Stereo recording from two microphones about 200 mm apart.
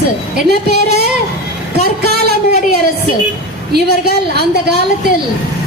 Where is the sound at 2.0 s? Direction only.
55° right (ahead or behind).